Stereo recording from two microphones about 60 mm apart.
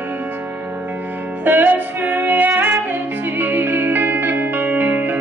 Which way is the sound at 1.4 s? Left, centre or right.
Right.